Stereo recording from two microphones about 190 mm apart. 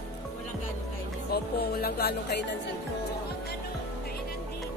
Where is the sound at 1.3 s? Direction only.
55° left (ahead or behind).